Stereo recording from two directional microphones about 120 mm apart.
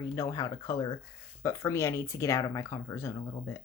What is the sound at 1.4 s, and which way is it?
Speech, 25° left (ahead or behind).